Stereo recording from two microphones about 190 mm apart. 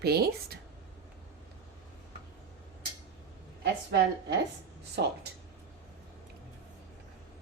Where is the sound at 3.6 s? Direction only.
60° right (ahead or behind).